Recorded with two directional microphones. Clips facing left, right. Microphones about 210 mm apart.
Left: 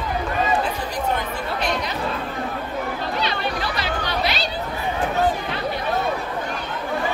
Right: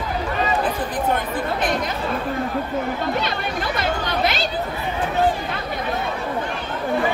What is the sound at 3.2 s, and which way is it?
Chatter, 50° right (ahead or behind).